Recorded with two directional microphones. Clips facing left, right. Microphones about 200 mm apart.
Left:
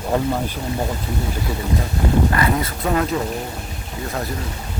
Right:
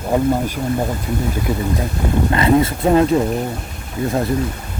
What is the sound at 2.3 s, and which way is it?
Speech, 25° right (ahead or behind).